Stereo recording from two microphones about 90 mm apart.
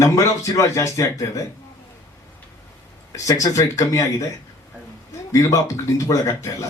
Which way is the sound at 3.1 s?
40° left (ahead or behind).